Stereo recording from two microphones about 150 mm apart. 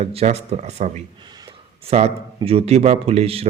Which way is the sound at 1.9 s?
45° right (ahead or behind).